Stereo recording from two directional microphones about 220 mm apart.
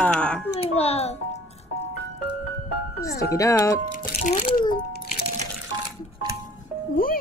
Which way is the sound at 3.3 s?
15° left (ahead or behind).